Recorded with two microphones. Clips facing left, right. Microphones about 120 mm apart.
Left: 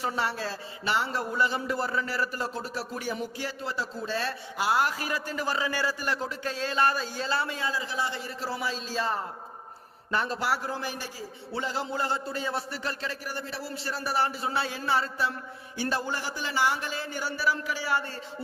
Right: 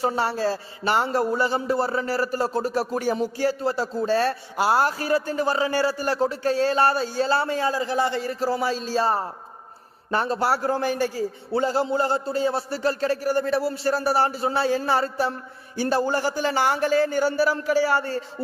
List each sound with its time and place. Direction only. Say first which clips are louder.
0.0 s a man's voice: right 7 dB; 35° right (ahead or behind)
10.6 s speech: right 11 dB; 50° right (ahead or behind)
11.5 s a man's voice: right 9 dB; 40° right (ahead or behind)